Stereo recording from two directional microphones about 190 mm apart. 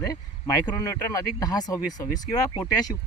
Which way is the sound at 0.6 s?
15° left (ahead or behind).